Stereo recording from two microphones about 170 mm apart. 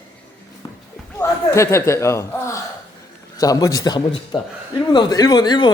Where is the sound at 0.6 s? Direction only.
30° left (ahead or behind).